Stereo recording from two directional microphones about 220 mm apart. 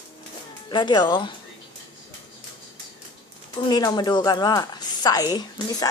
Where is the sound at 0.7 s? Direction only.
20° left (ahead or behind).